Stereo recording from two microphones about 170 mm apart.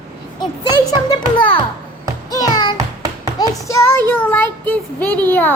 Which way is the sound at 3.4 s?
15° left (ahead or behind).